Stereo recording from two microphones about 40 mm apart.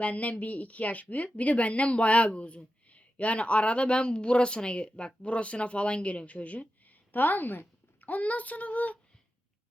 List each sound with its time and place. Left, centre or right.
0.0 s speech: left
8.1 s speech: left